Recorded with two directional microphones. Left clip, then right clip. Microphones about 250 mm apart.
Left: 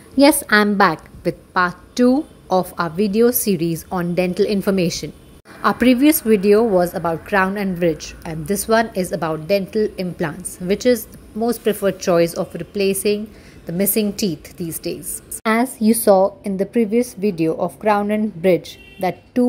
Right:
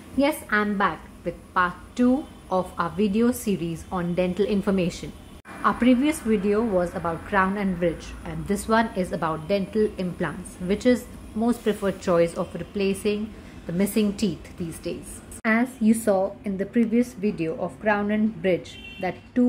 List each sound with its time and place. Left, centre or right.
0.2 s a woman's voice: left; by 14.7 s centre
15.4 s a woman's voice: left